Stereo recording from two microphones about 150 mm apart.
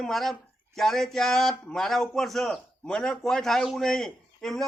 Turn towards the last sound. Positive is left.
turn(degrees=0)  # may be behind; listen again after turning